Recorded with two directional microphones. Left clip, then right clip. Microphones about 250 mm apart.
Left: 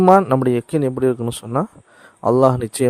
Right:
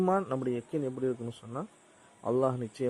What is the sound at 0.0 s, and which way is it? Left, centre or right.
A man's voice, left.